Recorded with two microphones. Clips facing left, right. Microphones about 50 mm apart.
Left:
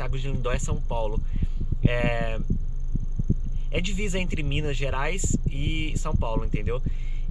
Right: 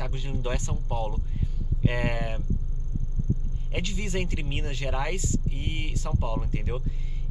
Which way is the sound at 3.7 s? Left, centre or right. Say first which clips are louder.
Left 3 dB; centre.